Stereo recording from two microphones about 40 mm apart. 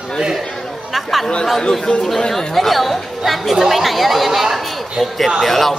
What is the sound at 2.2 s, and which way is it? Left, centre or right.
Speech, centre.